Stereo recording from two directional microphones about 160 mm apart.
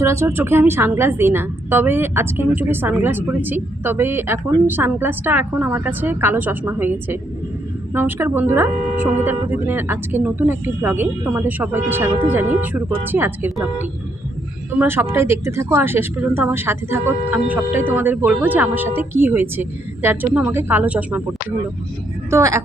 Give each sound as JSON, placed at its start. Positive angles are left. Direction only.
{"t": 0.0, "sound": "a woman's voice", "side_deg": -15}
{"t": 14.8, "sound": "a woman's voice", "side_deg": -15}
{"t": 22.3, "sound": "a woman's voice", "side_deg": -20}